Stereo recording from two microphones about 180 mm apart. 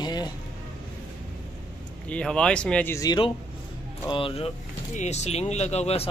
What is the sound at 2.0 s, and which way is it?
Speech, 5° left (ahead or behind).